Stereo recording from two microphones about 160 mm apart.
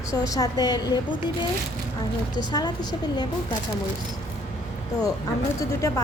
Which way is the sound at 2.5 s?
25° left (ahead or behind).